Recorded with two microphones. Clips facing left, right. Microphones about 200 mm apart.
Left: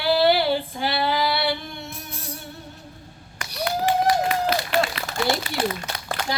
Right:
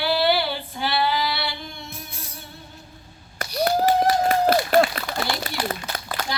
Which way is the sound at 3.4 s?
40° right (ahead or behind).